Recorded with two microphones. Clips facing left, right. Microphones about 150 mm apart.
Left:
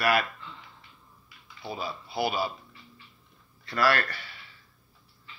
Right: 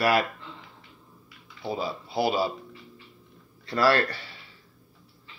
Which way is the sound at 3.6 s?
30° right (ahead or behind).